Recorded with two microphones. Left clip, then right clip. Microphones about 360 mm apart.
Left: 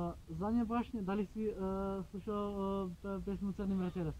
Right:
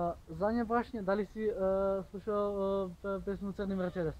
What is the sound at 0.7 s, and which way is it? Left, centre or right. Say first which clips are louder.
Speech: right 7 dB; centre.